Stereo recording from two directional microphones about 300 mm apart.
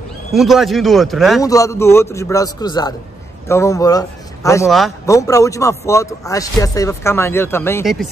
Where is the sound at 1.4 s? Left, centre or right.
Centre.